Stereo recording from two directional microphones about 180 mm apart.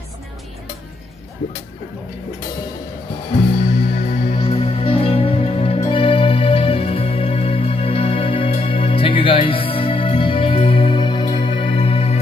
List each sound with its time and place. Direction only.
3.9 s music: 45° left (ahead or behind)
4.4 s music: 35° left (ahead or behind)